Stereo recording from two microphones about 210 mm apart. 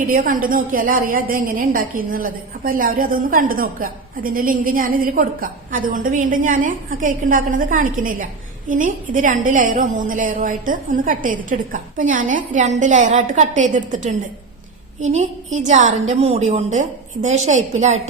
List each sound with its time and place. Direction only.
0.0 s a woman's voice: 40° right (ahead or behind)
15.5 s a woman's voice: 35° right (ahead or behind)